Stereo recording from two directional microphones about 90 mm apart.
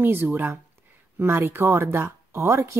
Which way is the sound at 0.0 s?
25° right (ahead or behind).